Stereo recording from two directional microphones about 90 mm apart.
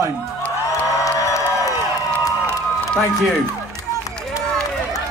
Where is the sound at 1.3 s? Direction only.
35° left (ahead or behind).